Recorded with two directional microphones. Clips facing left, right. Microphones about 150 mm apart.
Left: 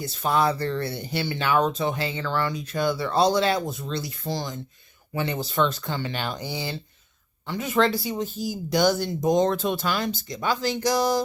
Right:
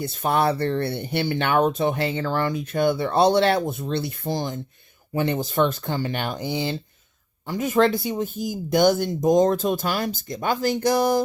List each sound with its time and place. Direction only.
0.0 s speech: 55° right (ahead or behind)
6.5 s speech: 20° right (ahead or behind)
7.4 s speech: 40° right (ahead or behind)